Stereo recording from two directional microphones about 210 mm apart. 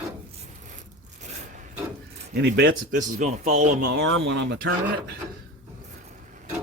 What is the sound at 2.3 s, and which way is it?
Speech, 55° right (ahead or behind).